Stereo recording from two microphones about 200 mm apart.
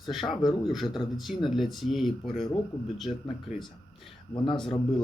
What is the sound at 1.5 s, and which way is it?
Speech, centre (ahead or behind).